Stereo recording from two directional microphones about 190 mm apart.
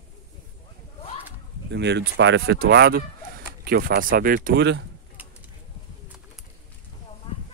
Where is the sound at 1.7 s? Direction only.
65° right (ahead or behind).